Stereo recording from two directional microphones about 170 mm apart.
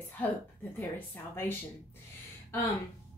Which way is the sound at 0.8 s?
10° left (ahead or behind).